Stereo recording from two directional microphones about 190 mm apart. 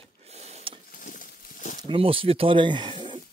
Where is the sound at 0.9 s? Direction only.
45° left (ahead or behind).